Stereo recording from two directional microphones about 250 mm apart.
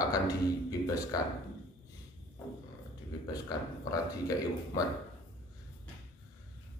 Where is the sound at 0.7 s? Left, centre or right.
Centre.